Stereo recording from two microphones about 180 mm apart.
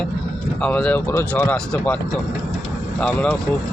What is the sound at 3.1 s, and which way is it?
Speech, 5° left (ahead or behind).